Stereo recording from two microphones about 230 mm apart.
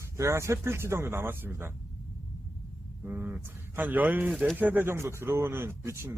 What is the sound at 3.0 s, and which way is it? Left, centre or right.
Speech, centre.